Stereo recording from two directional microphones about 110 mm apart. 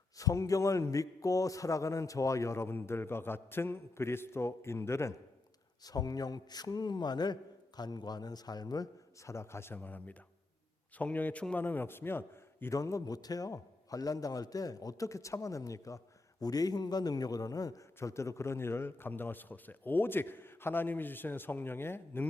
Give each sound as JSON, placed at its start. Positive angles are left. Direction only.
{"t": 0.2, "sound": "a man's voice", "side_deg": 30}